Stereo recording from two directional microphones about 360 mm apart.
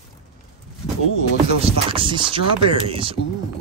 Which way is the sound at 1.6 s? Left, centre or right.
Centre.